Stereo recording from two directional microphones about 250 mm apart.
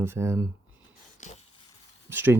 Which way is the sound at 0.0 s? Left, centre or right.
Centre.